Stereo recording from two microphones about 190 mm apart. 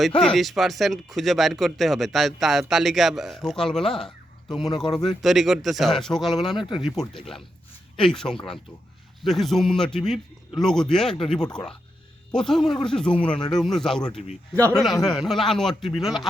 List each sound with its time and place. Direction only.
0.2 s speech: centre (ahead or behind)
6.6 s speech: 25° left (ahead or behind)
6.8 s speech: centre (ahead or behind)